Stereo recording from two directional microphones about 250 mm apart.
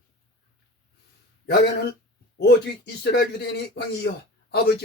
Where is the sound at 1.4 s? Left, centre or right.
Left.